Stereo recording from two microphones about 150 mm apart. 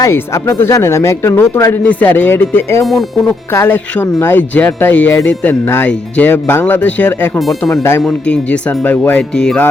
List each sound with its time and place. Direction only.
0.0 s speech: 15° left (ahead or behind)
2.8 s speech: centre (ahead or behind)
3.5 s speech: 20° left (ahead or behind)